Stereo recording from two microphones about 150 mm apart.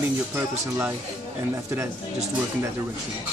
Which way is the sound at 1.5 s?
20° right (ahead or behind).